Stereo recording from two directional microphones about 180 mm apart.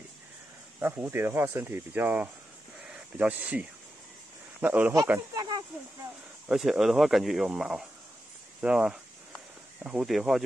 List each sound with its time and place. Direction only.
0.7 s speech: 10° right (ahead or behind)
5.3 s speech: 20° right (ahead or behind)
6.5 s speech: centre (ahead or behind)